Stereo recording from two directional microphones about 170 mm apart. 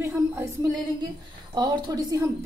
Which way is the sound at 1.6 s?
25° right (ahead or behind).